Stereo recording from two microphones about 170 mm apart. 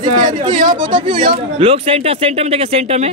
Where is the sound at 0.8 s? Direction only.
30° right (ahead or behind).